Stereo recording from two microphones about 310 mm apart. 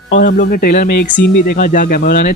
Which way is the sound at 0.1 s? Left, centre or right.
Left.